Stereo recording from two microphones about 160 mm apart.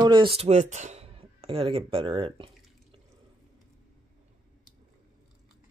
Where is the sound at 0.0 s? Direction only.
30° right (ahead or behind).